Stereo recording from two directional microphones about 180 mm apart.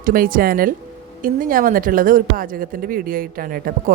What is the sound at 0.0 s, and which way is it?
A woman's voice, 50° right (ahead or behind).